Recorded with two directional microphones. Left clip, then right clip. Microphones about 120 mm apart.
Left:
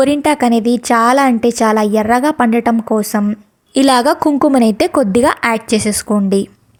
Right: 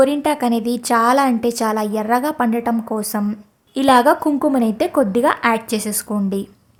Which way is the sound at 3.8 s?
50° left (ahead or behind).